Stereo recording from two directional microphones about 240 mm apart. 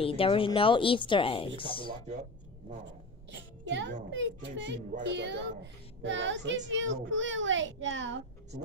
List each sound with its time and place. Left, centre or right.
0.0 s a woman's voice: left
3.3 s a sound: right
4.1 s a child's voice: right